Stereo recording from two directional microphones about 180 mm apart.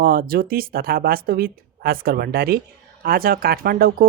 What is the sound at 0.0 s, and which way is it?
Speech, 55° right (ahead or behind).